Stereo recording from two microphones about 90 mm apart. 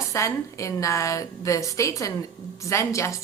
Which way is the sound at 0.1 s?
35° left (ahead or behind).